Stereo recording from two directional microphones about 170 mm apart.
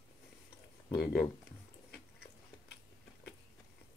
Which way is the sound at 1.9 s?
75° left (ahead or behind).